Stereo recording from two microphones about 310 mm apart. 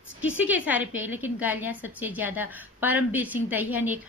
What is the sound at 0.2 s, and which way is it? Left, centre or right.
Speech, left.